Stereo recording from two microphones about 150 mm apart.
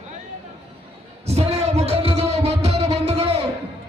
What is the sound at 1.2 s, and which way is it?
Music, 45° right (ahead or behind).